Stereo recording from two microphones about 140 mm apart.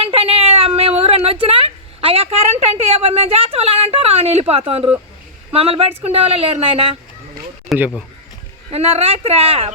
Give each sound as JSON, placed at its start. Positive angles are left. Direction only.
{"t": 0.0, "sound": "a sound", "side_deg": -45}
{"t": 5.5, "sound": "speech", "side_deg": -45}
{"t": 7.7, "sound": "speech", "side_deg": 0}
{"t": 8.7, "sound": "speech", "side_deg": -45}